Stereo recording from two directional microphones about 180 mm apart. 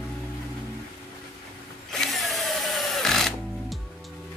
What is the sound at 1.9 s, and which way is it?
Drill, centre (ahead or behind).